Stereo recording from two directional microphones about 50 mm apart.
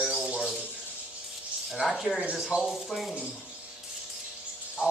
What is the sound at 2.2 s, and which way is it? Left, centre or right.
Speech, right.